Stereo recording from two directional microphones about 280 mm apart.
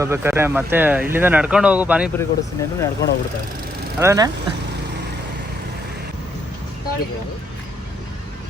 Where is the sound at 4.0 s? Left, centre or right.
Centre.